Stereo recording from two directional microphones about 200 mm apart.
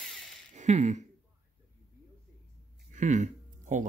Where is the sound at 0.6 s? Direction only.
35° right (ahead or behind).